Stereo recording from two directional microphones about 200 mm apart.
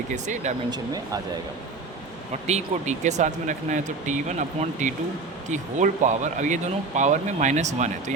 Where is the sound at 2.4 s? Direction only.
35° right (ahead or behind).